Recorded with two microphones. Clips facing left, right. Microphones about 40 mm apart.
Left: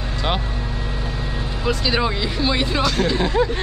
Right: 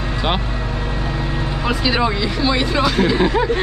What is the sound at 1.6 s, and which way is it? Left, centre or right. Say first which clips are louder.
Speech: right 2 dB; centre.